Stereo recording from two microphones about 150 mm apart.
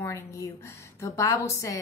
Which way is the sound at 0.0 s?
20° left (ahead or behind).